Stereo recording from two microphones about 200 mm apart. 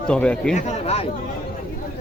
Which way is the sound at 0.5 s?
35° left (ahead or behind).